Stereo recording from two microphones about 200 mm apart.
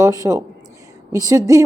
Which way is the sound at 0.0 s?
15° right (ahead or behind).